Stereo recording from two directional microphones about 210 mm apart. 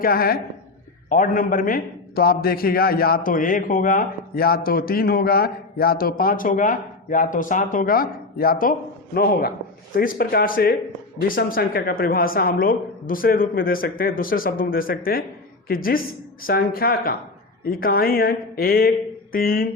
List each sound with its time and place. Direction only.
0.0 s a man's voice: 45° left (ahead or behind)